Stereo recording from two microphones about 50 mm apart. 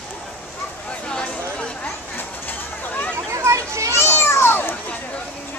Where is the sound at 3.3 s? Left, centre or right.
Right.